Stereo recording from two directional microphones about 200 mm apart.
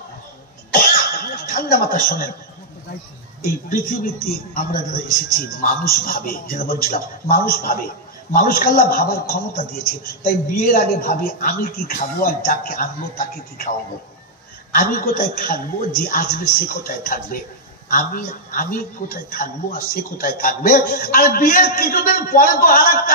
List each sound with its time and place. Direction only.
0.7 s cough: 45° left (ahead or behind)
3.6 s a woman's voice: 45° left (ahead or behind)
10.6 s a woman's voice: 45° left (ahead or behind)
14.7 s a woman's voice: 45° left (ahead or behind)